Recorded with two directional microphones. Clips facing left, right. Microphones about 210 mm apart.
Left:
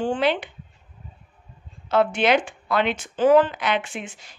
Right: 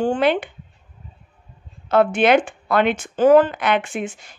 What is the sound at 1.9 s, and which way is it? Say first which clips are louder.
Speech: right 4 dB; 55° right (ahead or behind).